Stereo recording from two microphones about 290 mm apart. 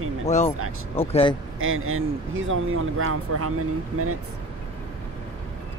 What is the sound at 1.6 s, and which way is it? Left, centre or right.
A man's voice, right.